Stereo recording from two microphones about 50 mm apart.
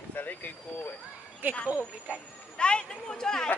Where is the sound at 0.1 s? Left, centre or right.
Left.